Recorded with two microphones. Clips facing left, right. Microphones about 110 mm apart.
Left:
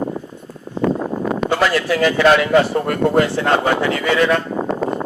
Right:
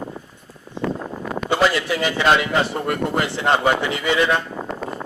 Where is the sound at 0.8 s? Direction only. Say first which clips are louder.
Left 7 dB; 60° left (ahead or behind).